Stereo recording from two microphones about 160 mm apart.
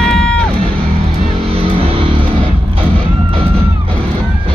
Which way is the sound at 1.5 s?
35° right (ahead or behind).